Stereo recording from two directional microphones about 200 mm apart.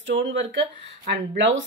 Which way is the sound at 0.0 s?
65° right (ahead or behind).